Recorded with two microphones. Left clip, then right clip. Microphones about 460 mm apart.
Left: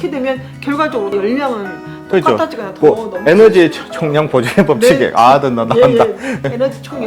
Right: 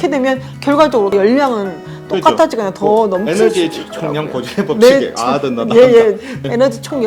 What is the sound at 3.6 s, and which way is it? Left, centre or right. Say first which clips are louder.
Speech: left 5 dB; left.